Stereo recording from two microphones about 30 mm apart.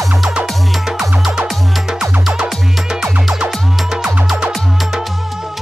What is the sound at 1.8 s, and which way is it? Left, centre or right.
Music, centre.